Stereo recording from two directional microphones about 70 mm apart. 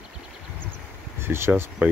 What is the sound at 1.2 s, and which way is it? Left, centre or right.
Speech, right.